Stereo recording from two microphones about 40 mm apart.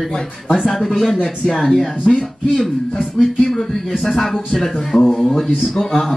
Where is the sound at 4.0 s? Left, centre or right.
Centre.